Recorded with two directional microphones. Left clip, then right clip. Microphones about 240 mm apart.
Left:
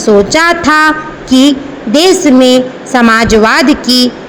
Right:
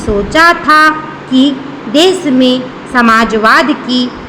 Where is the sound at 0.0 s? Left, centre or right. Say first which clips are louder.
Left 1 dB; left.